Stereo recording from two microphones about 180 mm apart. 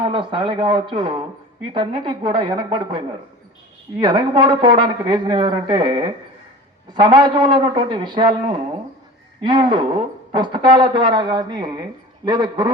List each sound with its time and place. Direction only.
0.0 s speech: 30° right (ahead or behind)
4.0 s speech: 25° right (ahead or behind)